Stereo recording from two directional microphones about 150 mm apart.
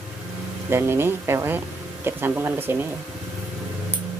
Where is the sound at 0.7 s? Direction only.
15° right (ahead or behind).